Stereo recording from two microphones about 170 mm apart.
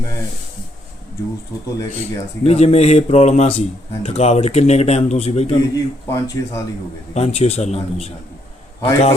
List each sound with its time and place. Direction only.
1.9 s speech: 40° left (ahead or behind)
5.7 s speech: 20° left (ahead or behind)
7.1 s speech: 35° left (ahead or behind)